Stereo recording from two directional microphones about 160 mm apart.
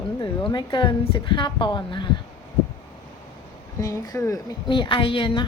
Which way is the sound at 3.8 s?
20° left (ahead or behind).